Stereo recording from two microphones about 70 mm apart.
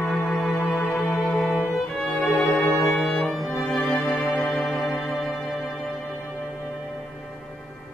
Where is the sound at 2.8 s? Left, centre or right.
Centre.